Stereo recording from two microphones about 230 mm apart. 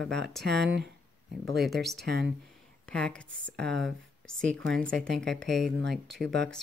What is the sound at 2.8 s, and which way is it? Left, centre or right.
Speech, centre.